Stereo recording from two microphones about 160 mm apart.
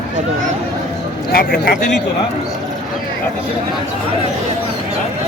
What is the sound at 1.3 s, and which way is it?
Speech, 65° left (ahead or behind).